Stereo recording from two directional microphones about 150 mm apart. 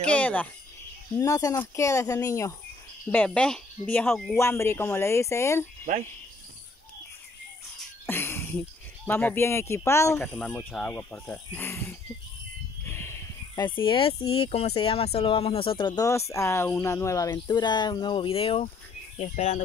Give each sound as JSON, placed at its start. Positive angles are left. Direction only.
{"t": 0.1, "sound": "speech", "side_deg": 10}
{"t": 1.1, "sound": "speech", "side_deg": 20}
{"t": 3.3, "sound": "speech", "side_deg": 5}
{"t": 4.4, "sound": "speech", "side_deg": 15}
{"t": 8.1, "sound": "speech", "side_deg": 15}
{"t": 10.2, "sound": "speech", "side_deg": 5}
{"t": 12.8, "sound": "a sound", "side_deg": 15}
{"t": 13.6, "sound": "speech", "side_deg": 35}